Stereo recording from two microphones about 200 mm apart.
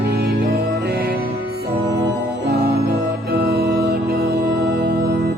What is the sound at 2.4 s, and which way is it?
Organ, 55° right (ahead or behind).